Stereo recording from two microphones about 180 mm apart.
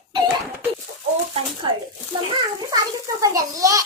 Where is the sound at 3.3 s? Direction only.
20° right (ahead or behind).